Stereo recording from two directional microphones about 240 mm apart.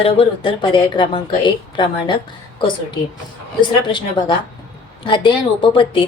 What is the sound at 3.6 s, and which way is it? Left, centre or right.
A woman's voice, centre.